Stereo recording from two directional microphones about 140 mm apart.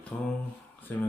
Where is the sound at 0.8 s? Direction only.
10° left (ahead or behind).